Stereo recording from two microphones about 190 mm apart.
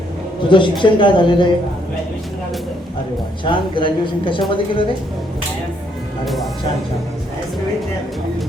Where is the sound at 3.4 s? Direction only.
25° left (ahead or behind).